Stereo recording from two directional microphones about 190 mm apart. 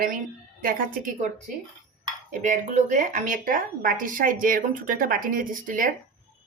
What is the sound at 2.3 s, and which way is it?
Speech, 40° right (ahead or behind).